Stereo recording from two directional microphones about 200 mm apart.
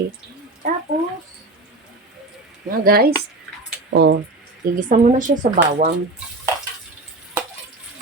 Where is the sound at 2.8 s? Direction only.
50° right (ahead or behind).